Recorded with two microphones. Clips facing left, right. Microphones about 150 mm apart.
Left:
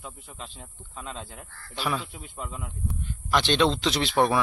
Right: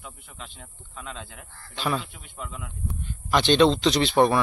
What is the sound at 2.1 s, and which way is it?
Speech, 35° left (ahead or behind).